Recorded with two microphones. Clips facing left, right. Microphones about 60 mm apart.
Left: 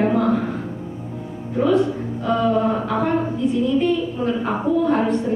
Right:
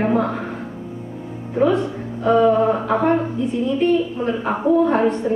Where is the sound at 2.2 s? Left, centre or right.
Right.